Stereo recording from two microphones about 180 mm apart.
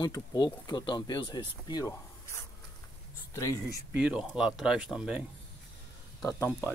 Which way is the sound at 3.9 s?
5° right (ahead or behind).